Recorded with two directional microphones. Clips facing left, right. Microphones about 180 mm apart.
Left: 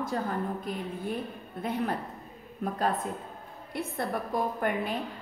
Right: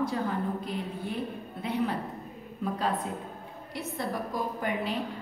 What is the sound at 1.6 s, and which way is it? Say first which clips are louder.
A woman's voice: right 1 dB; 50° left (ahead or behind).